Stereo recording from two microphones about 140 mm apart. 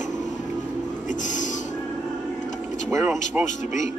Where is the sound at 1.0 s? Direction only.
65° left (ahead or behind).